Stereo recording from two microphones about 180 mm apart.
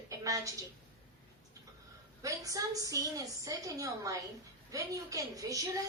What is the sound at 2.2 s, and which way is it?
A woman's voice, 20° right (ahead or behind).